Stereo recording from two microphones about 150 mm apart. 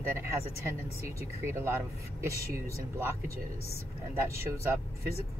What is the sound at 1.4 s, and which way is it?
Speech, 15° right (ahead or behind).